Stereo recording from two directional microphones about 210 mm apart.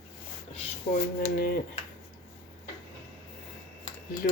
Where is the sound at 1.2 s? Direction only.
45° left (ahead or behind).